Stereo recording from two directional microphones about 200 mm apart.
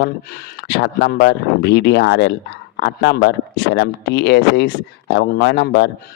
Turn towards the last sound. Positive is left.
turn(degrees=55)  # may be behind; listen again after turning